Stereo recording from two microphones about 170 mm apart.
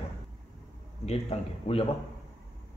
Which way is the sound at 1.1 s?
35° left (ahead or behind).